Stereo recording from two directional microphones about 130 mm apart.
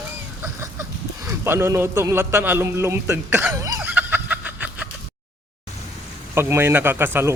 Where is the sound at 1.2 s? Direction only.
20° right (ahead or behind).